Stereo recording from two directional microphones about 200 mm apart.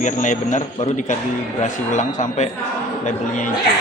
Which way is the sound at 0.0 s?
40° left (ahead or behind).